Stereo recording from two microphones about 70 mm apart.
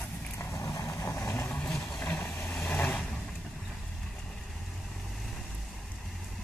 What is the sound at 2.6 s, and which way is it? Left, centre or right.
Vehicle, left.